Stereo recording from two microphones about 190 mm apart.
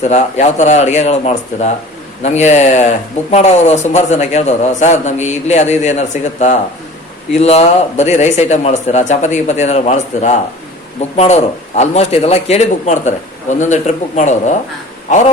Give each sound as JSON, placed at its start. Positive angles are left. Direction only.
{"t": 0.0, "sound": "a man's voice", "side_deg": 35}